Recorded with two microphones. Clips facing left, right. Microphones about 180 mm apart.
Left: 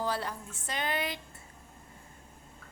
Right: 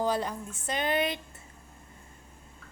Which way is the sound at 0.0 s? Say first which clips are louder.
Right 5 dB; 20° right (ahead or behind).